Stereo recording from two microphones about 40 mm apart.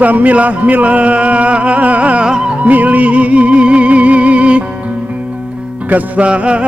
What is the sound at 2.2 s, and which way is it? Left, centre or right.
Music, right.